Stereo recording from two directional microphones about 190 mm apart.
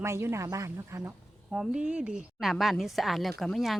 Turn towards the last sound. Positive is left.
turn(degrees=0)  # may be behind; listen again after turning